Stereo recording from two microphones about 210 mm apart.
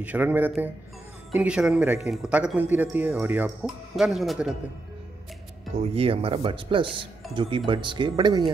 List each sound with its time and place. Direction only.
0.0 s a man's voice: 10° right (ahead or behind)
5.9 s speech: 25° right (ahead or behind)